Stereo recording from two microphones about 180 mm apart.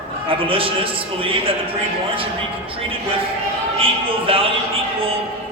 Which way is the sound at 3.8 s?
30° right (ahead or behind).